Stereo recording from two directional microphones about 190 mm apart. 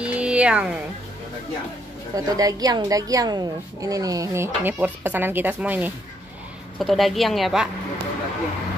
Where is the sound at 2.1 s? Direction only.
20° right (ahead or behind); by 7.7 s centre (ahead or behind).